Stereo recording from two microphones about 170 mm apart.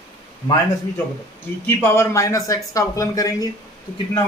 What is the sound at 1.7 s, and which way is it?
Speech, 15° left (ahead or behind).